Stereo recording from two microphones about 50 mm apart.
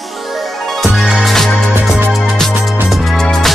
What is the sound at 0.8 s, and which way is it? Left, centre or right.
Music, centre.